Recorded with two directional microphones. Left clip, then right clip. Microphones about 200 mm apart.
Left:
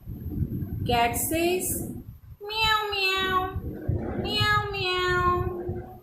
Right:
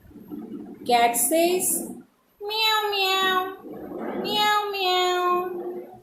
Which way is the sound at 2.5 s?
20° left (ahead or behind).